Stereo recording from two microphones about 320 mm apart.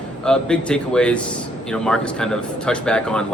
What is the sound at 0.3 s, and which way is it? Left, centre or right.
Speech, centre.